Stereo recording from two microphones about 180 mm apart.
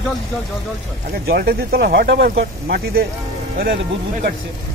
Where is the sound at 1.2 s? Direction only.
55° right (ahead or behind).